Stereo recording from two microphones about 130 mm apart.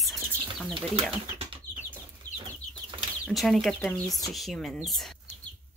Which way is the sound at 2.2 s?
75° left (ahead or behind).